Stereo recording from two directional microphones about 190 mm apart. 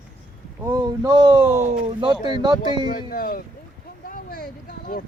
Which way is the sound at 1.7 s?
25° right (ahead or behind).